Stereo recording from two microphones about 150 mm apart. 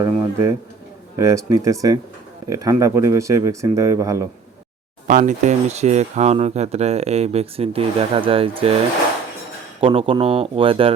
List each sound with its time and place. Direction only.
0.0 s speech: 20° right (ahead or behind)
5.0 s speech: 60° right (ahead or behind); by 8.7 s 40° right (ahead or behind)
9.8 s speech: 35° right (ahead or behind)